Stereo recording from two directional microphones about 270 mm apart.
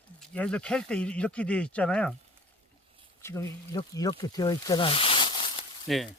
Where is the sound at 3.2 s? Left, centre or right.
Centre.